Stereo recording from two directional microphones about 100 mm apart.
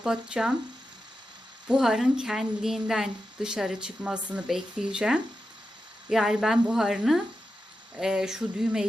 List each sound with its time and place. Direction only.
0.0 s a woman's voice: 5° right (ahead or behind)
1.6 s a woman's voice: 5° right (ahead or behind)